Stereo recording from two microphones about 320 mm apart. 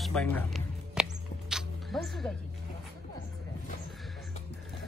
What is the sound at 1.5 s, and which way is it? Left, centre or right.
Music, centre.